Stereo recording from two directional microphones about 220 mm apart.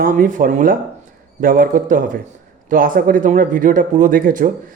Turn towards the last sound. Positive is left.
turn(degrees=-35)  # may be behind; listen again after turning